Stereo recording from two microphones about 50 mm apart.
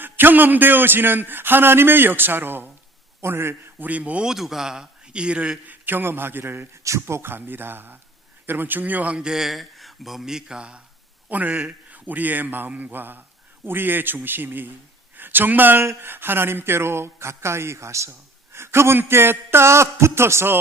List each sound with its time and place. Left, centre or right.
0.0 s a man's voice: right
3.2 s a man's voice: right
3.8 s a man's voice: right
4.3 s a man's voice: centre; by 6.7 s right
6.8 s speech: right
7.2 s a man's voice: right
9.1 s speech: centre
11.3 s a man's voice: right
18.1 s a man's voice: right